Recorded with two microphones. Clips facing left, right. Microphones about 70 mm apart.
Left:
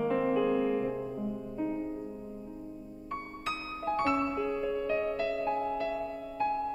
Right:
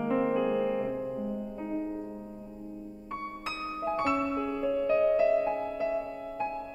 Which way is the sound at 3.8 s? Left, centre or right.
Centre.